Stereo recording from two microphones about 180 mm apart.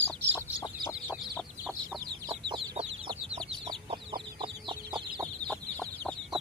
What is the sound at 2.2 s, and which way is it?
Chicken, 25° right (ahead or behind).